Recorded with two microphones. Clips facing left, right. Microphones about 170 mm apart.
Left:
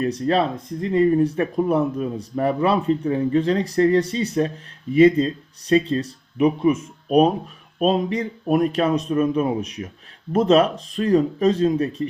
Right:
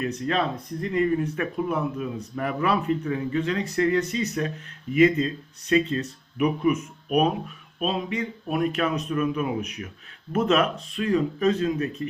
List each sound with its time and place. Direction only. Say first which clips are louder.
0.0 s speech: left 5 dB; 35° left (ahead or behind)